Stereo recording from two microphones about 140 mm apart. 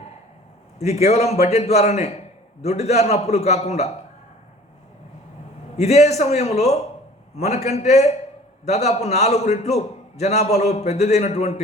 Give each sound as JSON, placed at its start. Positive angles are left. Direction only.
{"t": 0.8, "sound": "a man's voice", "side_deg": 50}
{"t": 5.7, "sound": "a man's voice", "side_deg": 50}